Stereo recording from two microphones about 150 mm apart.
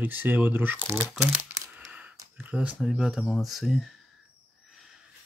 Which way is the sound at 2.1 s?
15° right (ahead or behind).